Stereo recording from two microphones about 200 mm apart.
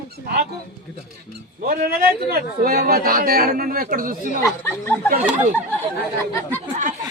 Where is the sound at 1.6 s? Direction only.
50° right (ahead or behind).